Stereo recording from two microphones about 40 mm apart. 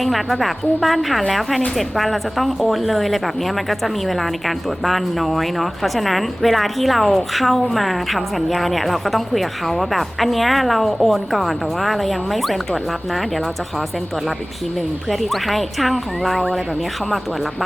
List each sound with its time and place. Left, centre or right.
0.0 s speech: centre
15.2 s speech: centre